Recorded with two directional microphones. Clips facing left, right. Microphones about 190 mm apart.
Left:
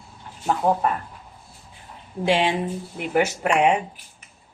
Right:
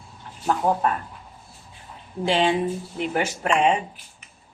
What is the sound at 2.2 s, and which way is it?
A woman's voice, 10° left (ahead or behind).